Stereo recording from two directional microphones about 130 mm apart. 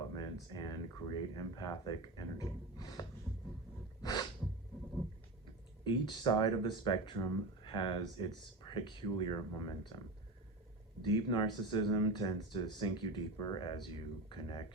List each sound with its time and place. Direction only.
0.2 s speech: 35° left (ahead or behind)
4.0 s sneeze: 30° left (ahead or behind)
5.8 s speech: 35° left (ahead or behind)
11.0 s speech: 35° left (ahead or behind)